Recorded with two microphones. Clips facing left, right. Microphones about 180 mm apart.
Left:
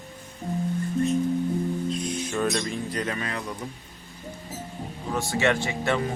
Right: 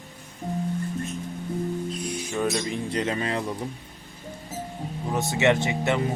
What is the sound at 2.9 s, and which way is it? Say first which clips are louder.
Speech: right 3 dB; 25° right (ahead or behind).